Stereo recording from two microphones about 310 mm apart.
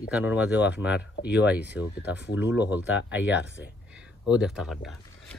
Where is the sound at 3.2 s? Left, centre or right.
Left.